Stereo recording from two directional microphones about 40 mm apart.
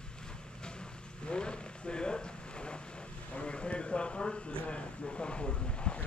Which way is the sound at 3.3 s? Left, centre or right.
Left.